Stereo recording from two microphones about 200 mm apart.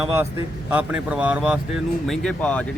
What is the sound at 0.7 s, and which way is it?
Speech, 10° right (ahead or behind).